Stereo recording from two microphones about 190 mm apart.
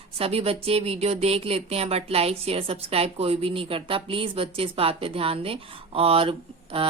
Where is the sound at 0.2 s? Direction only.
30° right (ahead or behind).